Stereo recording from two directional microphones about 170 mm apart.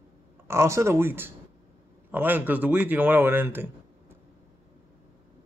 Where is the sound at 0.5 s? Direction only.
15° right (ahead or behind).